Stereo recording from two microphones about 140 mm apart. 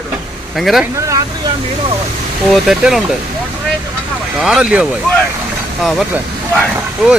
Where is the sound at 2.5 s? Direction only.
5° right (ahead or behind).